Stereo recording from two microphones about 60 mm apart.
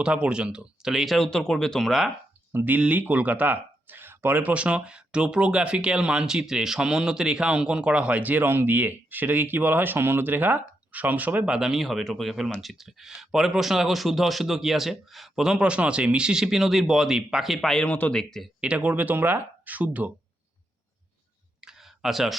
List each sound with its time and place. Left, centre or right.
0.0 s speech: centre
2.5 s speech: right
11.5 s speech: centre
17.8 s speech: left
18.1 s speech: centre
18.6 s speech: centre
18.9 s speech: right
21.6 s clicking: centre